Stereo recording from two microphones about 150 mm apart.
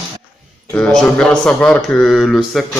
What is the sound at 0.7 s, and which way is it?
Speech, 5° left (ahead or behind).